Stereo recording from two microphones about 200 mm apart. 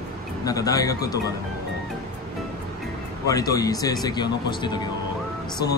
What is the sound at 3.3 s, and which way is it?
Speech, 15° left (ahead or behind).